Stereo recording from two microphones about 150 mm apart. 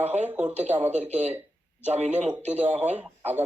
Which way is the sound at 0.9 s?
45° right (ahead or behind).